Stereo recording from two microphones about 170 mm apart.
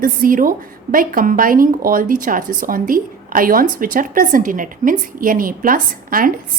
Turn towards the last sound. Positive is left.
turn(degrees=-55)  # may be behind; listen again after turning